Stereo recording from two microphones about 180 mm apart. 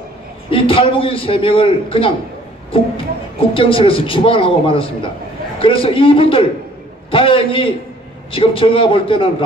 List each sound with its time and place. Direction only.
0.5 s a man's voice: 30° left (ahead or behind)
3.3 s a man's voice: 30° left (ahead or behind)